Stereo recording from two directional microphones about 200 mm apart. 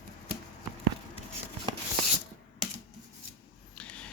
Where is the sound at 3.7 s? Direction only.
5° left (ahead or behind).